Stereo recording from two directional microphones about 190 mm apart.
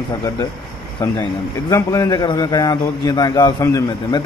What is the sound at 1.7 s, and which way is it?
A man's voice, 15° left (ahead or behind).